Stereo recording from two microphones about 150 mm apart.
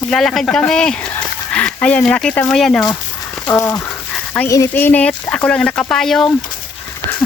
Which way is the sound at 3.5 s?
20° left (ahead or behind).